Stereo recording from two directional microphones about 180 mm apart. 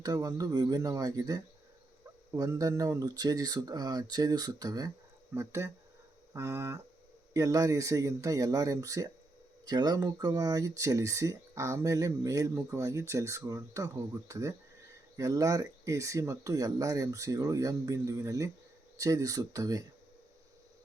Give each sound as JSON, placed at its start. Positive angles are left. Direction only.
{"t": 0.0, "sound": "speech", "side_deg": -20}